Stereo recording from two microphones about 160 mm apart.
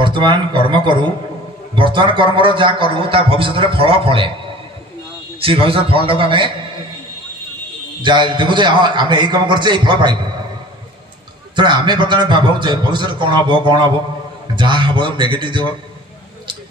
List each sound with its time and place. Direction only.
0.0 s a man's voice: 30° right (ahead or behind)
5.4 s a man's voice: 35° right (ahead or behind)
8.0 s a man's voice: 30° right (ahead or behind)
11.5 s a man's voice: 30° right (ahead or behind)